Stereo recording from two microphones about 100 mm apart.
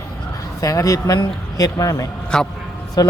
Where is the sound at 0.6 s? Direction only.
35° left (ahead or behind).